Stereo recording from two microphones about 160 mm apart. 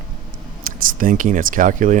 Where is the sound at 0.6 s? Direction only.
60° right (ahead or behind).